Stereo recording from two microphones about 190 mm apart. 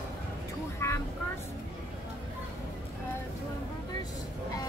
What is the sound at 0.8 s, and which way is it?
Vehicle, 15° left (ahead or behind).